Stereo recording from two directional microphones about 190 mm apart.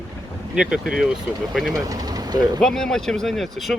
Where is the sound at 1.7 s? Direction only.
20° right (ahead or behind).